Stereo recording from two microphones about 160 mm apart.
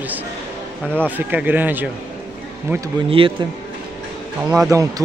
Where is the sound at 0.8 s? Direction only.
10° left (ahead or behind).